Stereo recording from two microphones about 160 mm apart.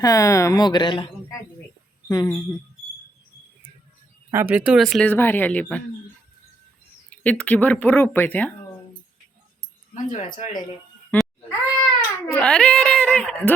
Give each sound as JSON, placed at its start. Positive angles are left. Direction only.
{"t": 0.0, "sound": "speech", "side_deg": 20}
{"t": 4.3, "sound": "speech", "side_deg": -15}
{"t": 5.1, "sound": "speech", "side_deg": 10}
{"t": 7.1, "sound": "speech", "side_deg": 10}
{"t": 9.9, "sound": "speech", "side_deg": 50}
{"t": 11.1, "sound": "meow", "side_deg": 10}
{"t": 12.4, "sound": "speech", "side_deg": 5}